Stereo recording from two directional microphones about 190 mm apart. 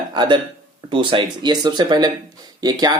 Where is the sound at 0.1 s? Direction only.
25° right (ahead or behind).